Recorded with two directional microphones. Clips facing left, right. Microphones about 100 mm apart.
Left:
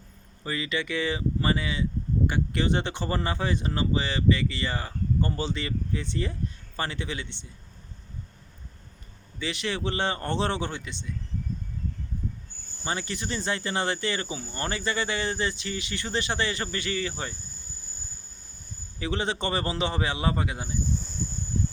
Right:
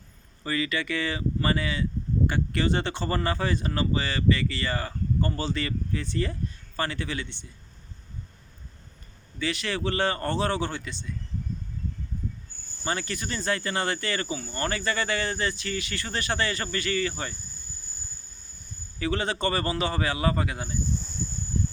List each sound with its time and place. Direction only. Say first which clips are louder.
0.4 s speech: right 2 dB; 20° left (ahead or behind)
9.4 s speech: right 1 dB; 20° left (ahead or behind)
12.8 s speech: right 1 dB; 15° left (ahead or behind)
18.9 s speech: right 1 dB; 20° left (ahead or behind)